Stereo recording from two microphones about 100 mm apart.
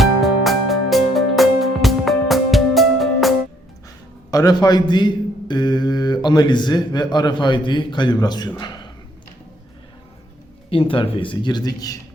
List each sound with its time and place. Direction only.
0.0 s music: centre (ahead or behind)
4.3 s a man's voice: 40° left (ahead or behind)
10.7 s speech: 65° left (ahead or behind); by 11.9 s 40° left (ahead or behind)